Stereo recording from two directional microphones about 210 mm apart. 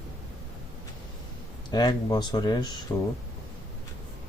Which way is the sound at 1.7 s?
20° left (ahead or behind).